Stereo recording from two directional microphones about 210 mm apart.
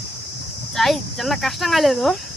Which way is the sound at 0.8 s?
Centre (ahead or behind).